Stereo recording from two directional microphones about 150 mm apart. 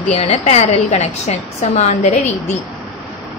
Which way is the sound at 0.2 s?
45° left (ahead or behind).